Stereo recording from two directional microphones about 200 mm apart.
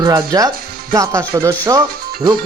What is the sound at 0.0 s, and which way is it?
Speech, 20° right (ahead or behind).